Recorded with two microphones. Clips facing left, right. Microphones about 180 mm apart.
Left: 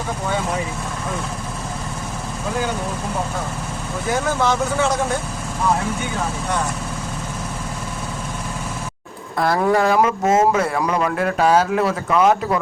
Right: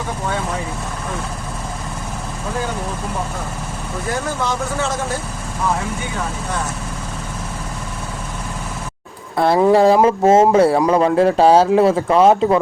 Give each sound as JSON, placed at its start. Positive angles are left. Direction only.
{"t": 9.4, "sound": "speech", "side_deg": -25}